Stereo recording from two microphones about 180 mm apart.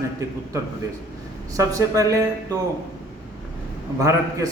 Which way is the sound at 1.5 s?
15° right (ahead or behind).